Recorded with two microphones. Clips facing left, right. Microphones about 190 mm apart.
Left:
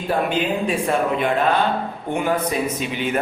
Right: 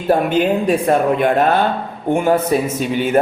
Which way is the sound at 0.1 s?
40° right (ahead or behind).